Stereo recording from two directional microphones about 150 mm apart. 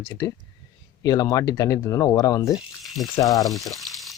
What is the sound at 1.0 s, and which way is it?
Speech, 25° left (ahead or behind).